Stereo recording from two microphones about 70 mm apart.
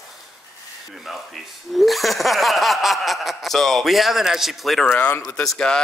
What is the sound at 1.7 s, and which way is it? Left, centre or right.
Speech, centre.